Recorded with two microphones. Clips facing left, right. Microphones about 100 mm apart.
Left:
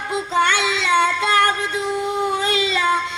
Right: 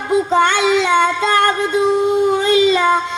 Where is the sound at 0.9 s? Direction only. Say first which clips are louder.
Right 3 dB; 20° right (ahead or behind).